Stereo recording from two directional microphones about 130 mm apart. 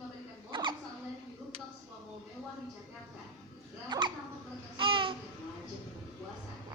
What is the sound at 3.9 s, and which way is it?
Hiccup, 35° right (ahead or behind).